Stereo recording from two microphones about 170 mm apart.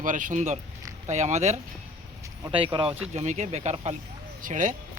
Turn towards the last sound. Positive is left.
turn(degrees=-50)  # may be behind; listen again after turning